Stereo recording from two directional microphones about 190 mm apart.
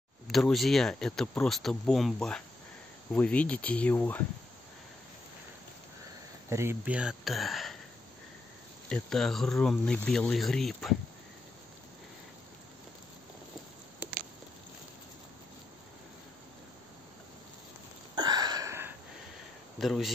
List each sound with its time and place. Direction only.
0.3 s speech: centre (ahead or behind)
6.5 s speech: 15° right (ahead or behind)
8.8 s speech: 5° left (ahead or behind)
18.1 s a sound: 20° right (ahead or behind)
19.8 s speech: centre (ahead or behind)